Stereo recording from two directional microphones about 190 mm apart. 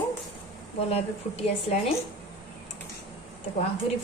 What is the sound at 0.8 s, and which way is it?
A woman's voice, 35° left (ahead or behind).